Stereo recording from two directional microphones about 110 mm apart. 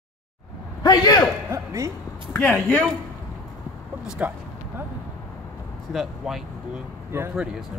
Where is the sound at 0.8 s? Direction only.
40° left (ahead or behind).